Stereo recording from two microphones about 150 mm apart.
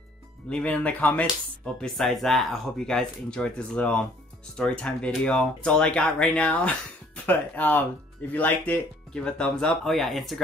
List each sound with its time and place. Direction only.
0.5 s speech: 10° left (ahead or behind)